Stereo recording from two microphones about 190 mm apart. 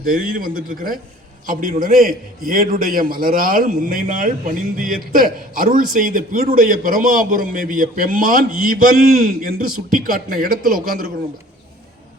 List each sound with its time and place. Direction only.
0.0 s a man's voice: 50° right (ahead or behind)